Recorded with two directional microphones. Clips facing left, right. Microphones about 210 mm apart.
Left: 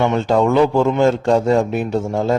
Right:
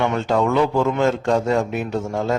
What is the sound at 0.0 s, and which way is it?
Speech, 30° left (ahead or behind).